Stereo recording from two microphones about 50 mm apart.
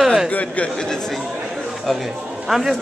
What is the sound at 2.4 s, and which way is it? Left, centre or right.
Speech, centre.